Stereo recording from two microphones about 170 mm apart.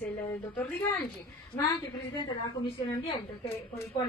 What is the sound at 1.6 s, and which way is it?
Speech, 20° left (ahead or behind).